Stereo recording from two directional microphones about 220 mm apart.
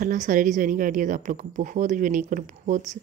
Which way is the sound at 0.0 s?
35° right (ahead or behind).